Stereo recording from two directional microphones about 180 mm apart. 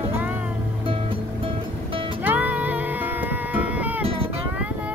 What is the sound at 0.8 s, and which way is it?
Music, 30° right (ahead or behind).